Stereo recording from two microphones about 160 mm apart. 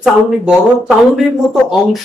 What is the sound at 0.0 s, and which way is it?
Speech, 5° right (ahead or behind).